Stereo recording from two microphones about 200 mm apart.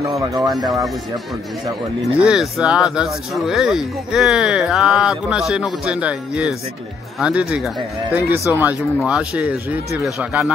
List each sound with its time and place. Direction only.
0.0 s speech: 15° right (ahead or behind)
2.1 s speech: 5° right (ahead or behind)